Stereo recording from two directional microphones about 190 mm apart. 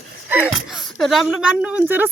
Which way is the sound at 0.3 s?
10° right (ahead or behind).